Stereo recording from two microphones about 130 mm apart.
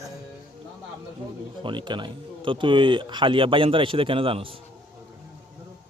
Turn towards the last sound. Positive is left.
turn(degrees=-45)  # may be behind; listen again after turning